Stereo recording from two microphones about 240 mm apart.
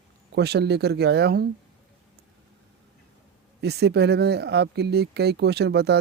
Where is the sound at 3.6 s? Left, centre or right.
Right.